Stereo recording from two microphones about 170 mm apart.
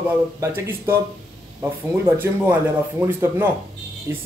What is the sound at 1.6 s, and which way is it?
Speech, 15° right (ahead or behind).